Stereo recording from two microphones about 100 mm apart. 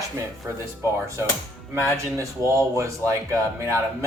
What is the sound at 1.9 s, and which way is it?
Speech, 30° right (ahead or behind).